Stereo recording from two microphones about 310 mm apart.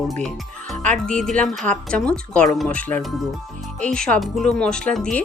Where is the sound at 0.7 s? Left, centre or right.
Right.